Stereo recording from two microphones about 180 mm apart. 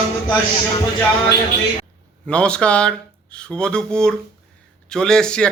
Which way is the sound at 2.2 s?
5° left (ahead or behind).